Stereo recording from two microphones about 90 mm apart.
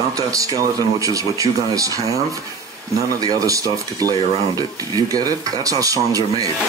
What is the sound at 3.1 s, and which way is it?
Speech, 40° right (ahead or behind).